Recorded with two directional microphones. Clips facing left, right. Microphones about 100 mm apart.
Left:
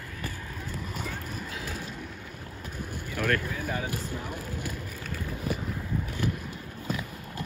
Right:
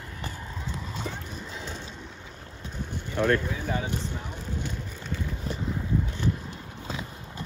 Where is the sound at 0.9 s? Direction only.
25° right (ahead or behind).